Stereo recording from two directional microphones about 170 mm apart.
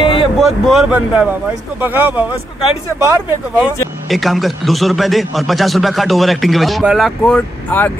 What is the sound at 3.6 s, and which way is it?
A man's voice, centre (ahead or behind).